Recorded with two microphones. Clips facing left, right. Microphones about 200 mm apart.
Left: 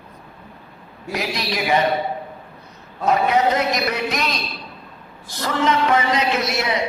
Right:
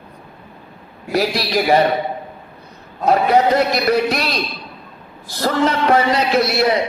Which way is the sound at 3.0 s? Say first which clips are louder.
Right 3 dB; 35° right (ahead or behind).